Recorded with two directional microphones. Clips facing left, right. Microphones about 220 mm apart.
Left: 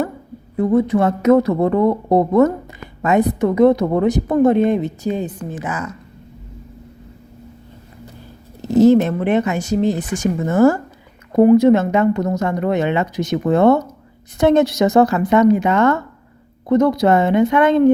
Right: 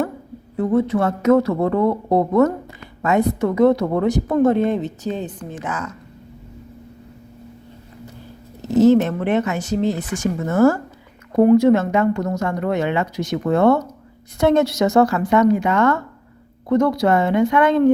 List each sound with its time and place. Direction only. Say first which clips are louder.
0.5 s a woman's voice: left 3 dB; 10° left (ahead or behind)
8.8 s a woman's voice: left 2 dB; 10° left (ahead or behind)